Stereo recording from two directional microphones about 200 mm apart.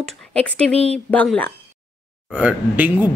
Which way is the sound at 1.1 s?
5° left (ahead or behind).